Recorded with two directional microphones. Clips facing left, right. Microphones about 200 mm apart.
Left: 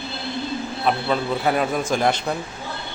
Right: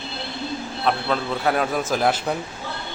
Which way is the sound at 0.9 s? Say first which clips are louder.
Left 1 dB; 5° left (ahead or behind).